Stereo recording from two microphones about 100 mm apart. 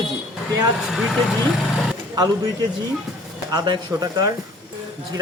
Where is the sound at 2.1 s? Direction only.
45° right (ahead or behind).